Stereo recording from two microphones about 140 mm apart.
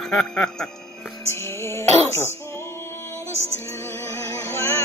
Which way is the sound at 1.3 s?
20° left (ahead or behind).